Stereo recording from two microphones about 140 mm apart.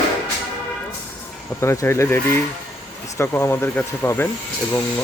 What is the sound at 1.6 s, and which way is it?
Speech, 20° left (ahead or behind).